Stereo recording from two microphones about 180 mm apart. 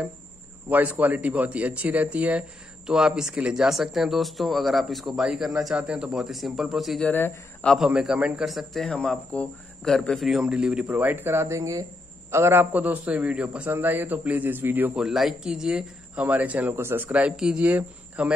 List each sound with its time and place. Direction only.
0.7 s a man's voice: 10° right (ahead or behind)
7.1 s speech: 10° left (ahead or behind)
7.7 s a man's voice: 5° right (ahead or behind)